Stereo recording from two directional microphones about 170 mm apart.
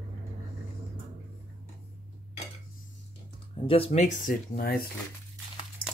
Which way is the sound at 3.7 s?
35° left (ahead or behind).